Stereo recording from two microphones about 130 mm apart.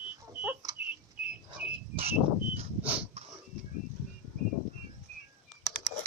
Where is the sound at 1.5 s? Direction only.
50° right (ahead or behind).